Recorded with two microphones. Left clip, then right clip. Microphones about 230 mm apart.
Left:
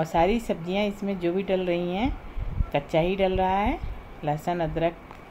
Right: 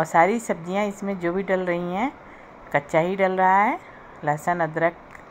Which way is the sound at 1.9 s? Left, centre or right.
Right.